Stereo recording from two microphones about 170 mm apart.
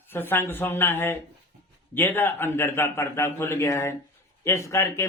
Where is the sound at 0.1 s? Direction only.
10° left (ahead or behind).